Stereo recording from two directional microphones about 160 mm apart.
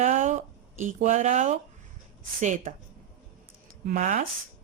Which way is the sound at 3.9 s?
45° right (ahead or behind).